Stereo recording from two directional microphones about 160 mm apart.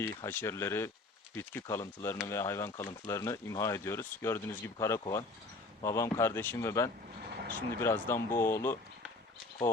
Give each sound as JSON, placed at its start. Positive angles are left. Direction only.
{"t": 0.0, "sound": "speech", "side_deg": 15}